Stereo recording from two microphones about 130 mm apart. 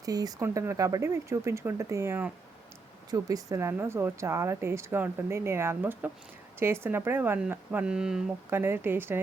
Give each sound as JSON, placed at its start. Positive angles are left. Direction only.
{"t": 0.0, "sound": "a woman's voice", "side_deg": -30}
{"t": 8.4, "sound": "speech", "side_deg": -15}